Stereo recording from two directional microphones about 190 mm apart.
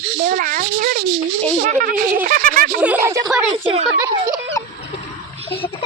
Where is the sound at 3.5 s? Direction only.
30° right (ahead or behind).